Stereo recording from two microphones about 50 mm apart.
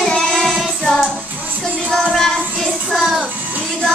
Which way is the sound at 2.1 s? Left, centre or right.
Centre.